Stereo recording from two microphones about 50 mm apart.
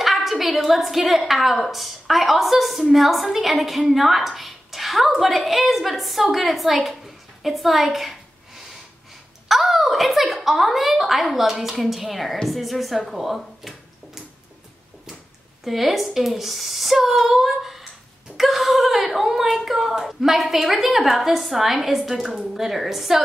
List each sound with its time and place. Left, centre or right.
0.0 s a woman's voice: centre
9.5 s a woman's voice: centre
15.6 s speech: centre